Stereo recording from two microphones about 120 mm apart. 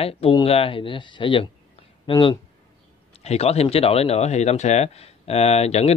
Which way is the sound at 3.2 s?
60° left (ahead or behind).